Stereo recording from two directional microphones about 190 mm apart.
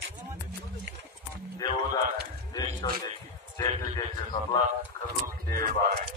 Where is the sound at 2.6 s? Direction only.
20° left (ahead or behind).